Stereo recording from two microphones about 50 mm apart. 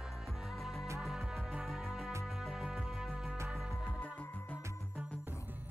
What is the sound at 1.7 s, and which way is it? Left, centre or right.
Music, centre.